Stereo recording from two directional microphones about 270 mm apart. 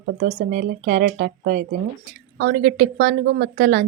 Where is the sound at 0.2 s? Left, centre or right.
Right.